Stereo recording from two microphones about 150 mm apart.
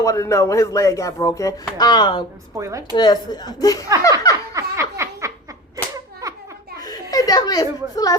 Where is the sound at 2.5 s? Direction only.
20° right (ahead or behind).